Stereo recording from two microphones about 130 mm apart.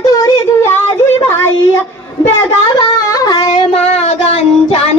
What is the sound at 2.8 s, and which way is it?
Music, 30° left (ahead or behind).